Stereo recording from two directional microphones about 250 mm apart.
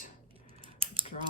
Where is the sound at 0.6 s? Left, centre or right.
Right.